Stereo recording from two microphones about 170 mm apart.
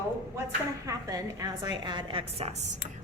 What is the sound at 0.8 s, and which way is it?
A woman's voice, 20° right (ahead or behind).